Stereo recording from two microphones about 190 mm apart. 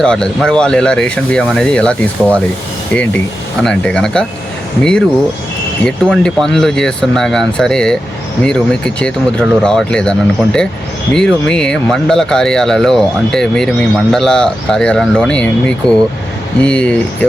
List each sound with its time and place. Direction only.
0.0 s speech: 5° left (ahead or behind)